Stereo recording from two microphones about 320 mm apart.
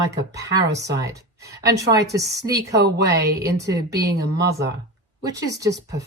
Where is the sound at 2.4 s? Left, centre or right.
Right.